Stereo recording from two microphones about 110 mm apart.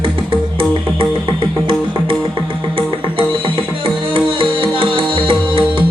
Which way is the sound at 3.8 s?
50° right (ahead or behind).